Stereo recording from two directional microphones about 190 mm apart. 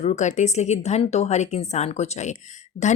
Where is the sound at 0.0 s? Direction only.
35° left (ahead or behind).